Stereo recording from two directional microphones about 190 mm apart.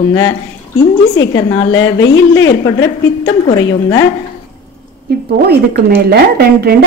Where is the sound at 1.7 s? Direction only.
90° left.